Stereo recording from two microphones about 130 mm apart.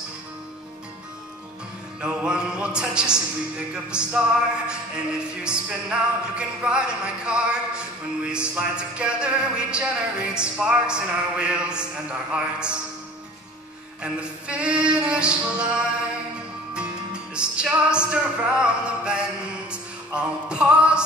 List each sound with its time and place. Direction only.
2.0 s speech: 5° right (ahead or behind)
14.0 s speech: 10° right (ahead or behind)
16.7 s music: 10° right (ahead or behind)
18.1 s speech: 5° right (ahead or behind)
19.7 s music: 10° right (ahead or behind)